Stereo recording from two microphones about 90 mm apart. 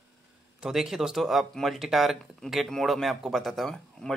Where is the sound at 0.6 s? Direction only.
5° right (ahead or behind).